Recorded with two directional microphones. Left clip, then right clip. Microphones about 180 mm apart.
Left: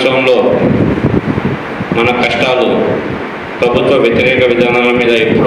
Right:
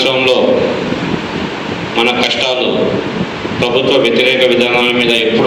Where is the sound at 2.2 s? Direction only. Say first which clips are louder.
Left 2 dB; 75° left (ahead or behind).